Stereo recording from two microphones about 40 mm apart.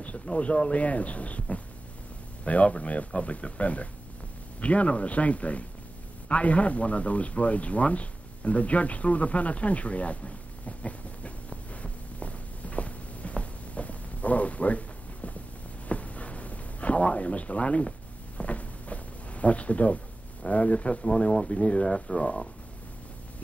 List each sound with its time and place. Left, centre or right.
0.0 s speech: left
10.8 s a sound: left
20.4 s speech: left; by 22.2 s centre